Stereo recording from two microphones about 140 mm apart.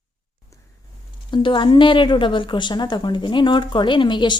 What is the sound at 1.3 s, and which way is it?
A woman's voice, 35° left (ahead or behind).